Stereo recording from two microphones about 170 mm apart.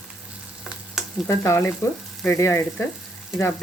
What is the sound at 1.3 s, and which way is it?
Speech, 15° left (ahead or behind).